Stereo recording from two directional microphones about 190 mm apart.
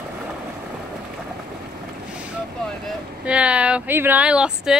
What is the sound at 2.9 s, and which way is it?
Speech, 5° right (ahead or behind).